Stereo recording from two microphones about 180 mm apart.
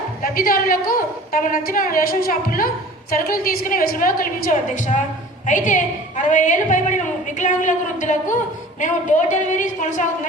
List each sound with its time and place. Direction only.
0.2 s a woman's voice: 50° left (ahead or behind)